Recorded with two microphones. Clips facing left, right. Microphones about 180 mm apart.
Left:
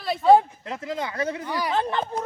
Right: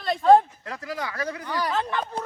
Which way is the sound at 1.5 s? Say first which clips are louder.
Even; 10° left (ahead or behind).